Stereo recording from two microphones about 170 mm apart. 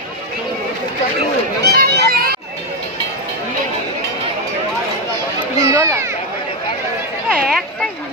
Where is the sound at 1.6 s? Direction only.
70° right (ahead or behind).